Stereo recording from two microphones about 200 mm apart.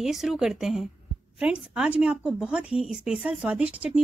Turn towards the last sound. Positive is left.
turn(degrees=-5)  # may be behind; listen again after turning